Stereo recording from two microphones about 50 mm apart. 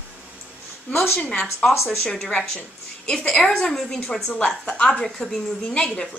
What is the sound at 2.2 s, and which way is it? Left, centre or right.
A woman's voice, centre.